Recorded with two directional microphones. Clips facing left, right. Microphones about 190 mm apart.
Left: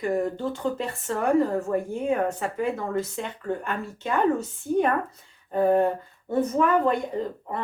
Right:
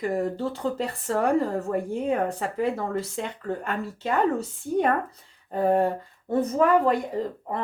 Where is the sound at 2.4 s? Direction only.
35° right (ahead or behind).